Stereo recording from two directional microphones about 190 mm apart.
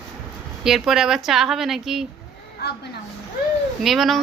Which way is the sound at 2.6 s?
60° left (ahead or behind).